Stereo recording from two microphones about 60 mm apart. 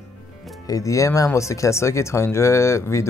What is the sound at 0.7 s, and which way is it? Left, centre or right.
A man's voice, left.